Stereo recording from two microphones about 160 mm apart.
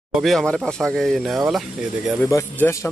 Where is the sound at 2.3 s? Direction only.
15° left (ahead or behind).